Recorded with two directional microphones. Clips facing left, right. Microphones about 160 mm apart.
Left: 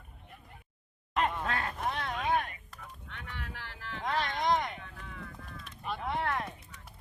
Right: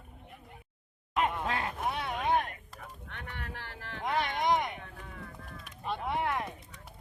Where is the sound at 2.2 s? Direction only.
25° right (ahead or behind).